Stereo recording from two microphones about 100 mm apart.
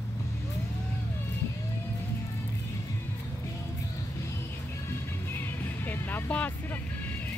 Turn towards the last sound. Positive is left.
turn(degrees=15)  # may be behind; listen again after turning